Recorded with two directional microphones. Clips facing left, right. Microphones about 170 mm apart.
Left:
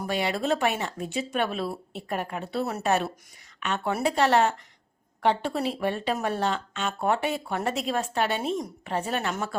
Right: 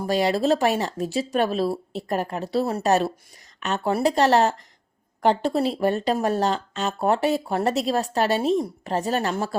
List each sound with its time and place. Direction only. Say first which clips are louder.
0.0 s speech: right 6 dB; 35° right (ahead or behind)